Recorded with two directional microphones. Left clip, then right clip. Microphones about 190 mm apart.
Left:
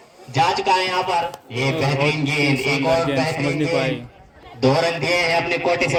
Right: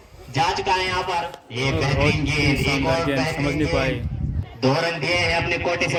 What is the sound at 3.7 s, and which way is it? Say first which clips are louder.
Speech: left 1 dB; 5° right (ahead or behind).